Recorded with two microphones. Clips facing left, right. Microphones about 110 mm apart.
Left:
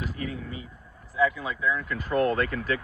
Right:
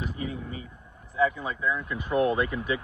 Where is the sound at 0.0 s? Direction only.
20° right (ahead or behind).